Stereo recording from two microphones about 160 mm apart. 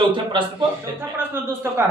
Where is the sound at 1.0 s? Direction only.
15° right (ahead or behind).